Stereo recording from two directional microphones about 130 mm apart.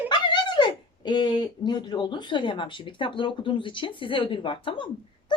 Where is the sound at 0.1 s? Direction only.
35° left (ahead or behind).